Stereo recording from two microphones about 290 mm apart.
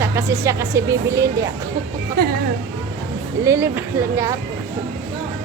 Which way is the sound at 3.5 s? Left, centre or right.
Centre.